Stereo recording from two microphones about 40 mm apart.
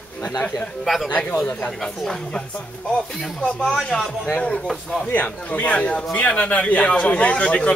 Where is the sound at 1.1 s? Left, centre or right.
Left.